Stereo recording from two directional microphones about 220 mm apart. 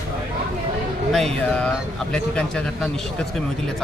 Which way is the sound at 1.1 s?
Centre (ahead or behind).